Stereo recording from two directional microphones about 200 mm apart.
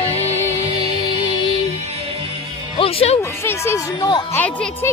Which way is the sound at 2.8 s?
30° left (ahead or behind).